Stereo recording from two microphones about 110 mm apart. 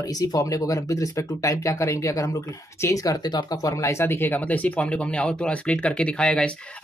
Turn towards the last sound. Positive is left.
turn(degrees=10)  # may be behind; listen again after turning